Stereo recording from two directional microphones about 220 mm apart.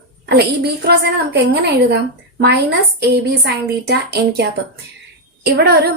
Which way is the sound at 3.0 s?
50° right (ahead or behind).